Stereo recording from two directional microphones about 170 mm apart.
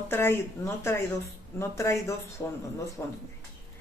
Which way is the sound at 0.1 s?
15° left (ahead or behind).